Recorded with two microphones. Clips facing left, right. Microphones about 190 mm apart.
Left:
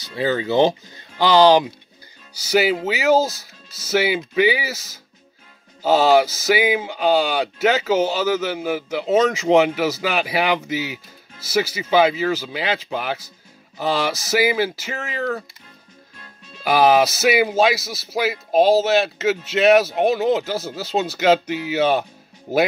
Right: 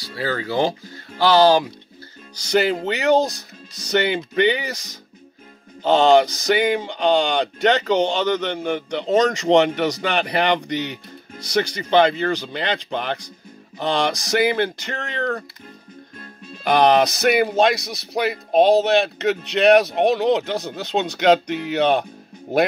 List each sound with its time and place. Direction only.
0.0 s speech: 20° left (ahead or behind)
2.3 s speech: 5° left (ahead or behind)
16.6 s speech: 5° left (ahead or behind)